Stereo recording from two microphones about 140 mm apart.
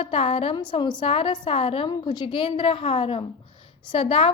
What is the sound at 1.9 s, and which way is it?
A woman's voice, 25° left (ahead or behind).